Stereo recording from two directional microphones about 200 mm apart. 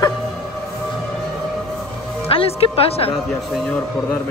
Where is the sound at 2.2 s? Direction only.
30° left (ahead or behind).